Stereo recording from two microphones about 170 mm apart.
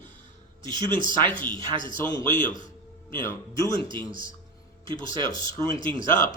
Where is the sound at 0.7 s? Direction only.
25° right (ahead or behind).